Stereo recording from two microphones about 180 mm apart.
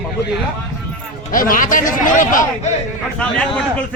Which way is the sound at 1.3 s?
50° left (ahead or behind).